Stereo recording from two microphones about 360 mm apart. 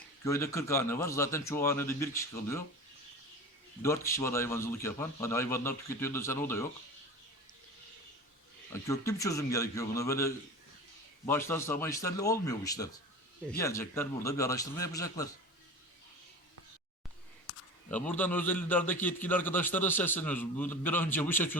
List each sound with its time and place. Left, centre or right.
0.3 s a man's voice: centre
3.8 s a man's voice: centre
8.7 s a man's voice: centre
17.5 s a sound: left
17.9 s a man's voice: centre